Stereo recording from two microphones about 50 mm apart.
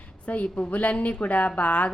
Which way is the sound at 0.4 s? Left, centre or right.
Left.